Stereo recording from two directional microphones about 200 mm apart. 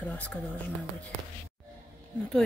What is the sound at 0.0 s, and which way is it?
Speech, 10° left (ahead or behind).